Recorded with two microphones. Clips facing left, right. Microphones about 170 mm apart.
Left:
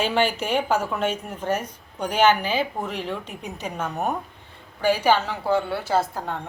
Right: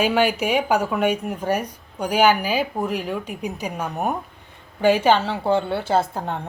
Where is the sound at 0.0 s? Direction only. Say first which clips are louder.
Right 3 dB; 10° right (ahead or behind).